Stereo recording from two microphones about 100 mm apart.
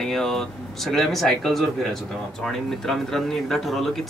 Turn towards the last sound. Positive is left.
turn(degrees=0)  # may be behind; listen again after turning